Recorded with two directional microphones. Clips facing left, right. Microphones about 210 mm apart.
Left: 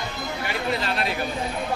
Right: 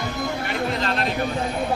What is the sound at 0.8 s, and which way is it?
Speech, 10° left (ahead or behind).